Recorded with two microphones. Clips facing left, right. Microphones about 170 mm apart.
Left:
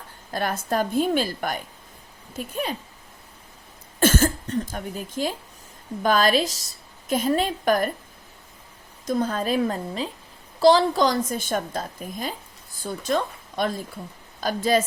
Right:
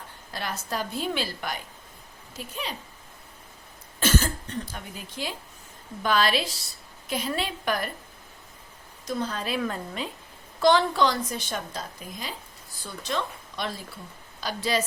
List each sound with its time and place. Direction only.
0.3 s a woman's voice: 50° left (ahead or behind)
4.0 s a woman's voice: 50° left (ahead or behind)
9.0 s a woman's voice: 50° left (ahead or behind)